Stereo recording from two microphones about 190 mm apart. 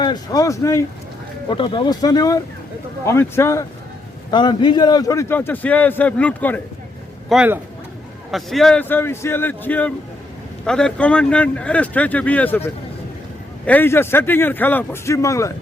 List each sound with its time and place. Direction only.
0.0 s a man's voice: 20° left (ahead or behind)
7.3 s a man's voice: 5° right (ahead or behind); by 15.5 s 15° left (ahead or behind)